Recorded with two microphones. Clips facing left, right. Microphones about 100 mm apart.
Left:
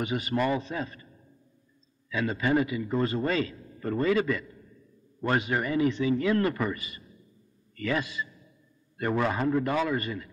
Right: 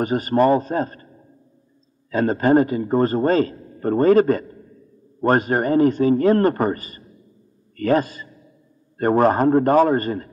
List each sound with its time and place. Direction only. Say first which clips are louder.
0.0 s a man's voice: right 10 dB; 45° right (ahead or behind)